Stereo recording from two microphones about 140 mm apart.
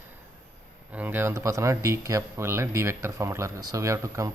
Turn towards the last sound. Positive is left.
turn(degrees=-20)  # may be behind; listen again after turning